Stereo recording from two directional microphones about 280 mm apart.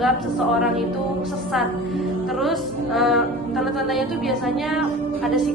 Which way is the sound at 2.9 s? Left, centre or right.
Centre.